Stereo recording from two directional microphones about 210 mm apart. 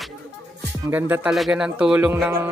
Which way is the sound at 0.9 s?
5° right (ahead or behind).